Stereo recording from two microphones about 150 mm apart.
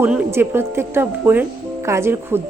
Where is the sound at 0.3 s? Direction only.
15° right (ahead or behind).